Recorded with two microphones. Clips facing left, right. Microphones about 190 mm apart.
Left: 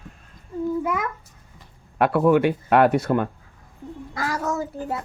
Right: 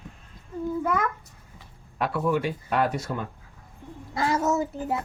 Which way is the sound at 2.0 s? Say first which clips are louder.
Left 8 dB; 60° left (ahead or behind).